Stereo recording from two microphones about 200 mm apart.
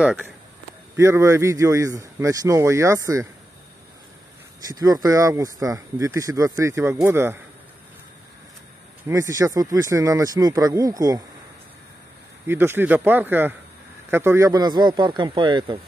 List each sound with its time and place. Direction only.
0.0 s speech: 5° right (ahead or behind)
4.6 s speech: 20° right (ahead or behind)
9.0 s speech: 15° right (ahead or behind)
12.4 s speech: 10° right (ahead or behind)